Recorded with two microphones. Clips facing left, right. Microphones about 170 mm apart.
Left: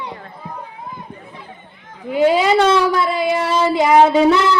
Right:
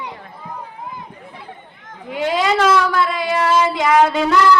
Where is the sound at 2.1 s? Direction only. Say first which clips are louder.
Left 5 dB; 5° left (ahead or behind).